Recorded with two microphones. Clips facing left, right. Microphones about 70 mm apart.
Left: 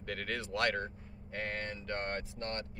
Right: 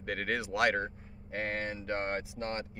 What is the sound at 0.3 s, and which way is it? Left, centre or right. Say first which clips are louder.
Speech: right 4 dB; centre.